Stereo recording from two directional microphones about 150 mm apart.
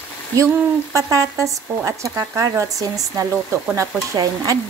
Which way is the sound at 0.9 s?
20° right (ahead or behind).